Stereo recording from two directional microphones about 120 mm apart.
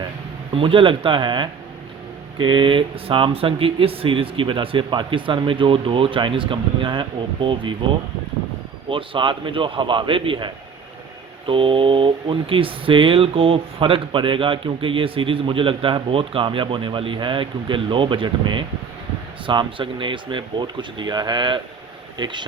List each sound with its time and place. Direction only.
0.5 s speech: 45° right (ahead or behind)
8.9 s speech: 45° right (ahead or behind)